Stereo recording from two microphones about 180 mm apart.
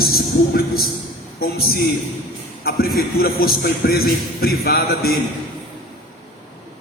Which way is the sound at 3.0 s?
60° left (ahead or behind).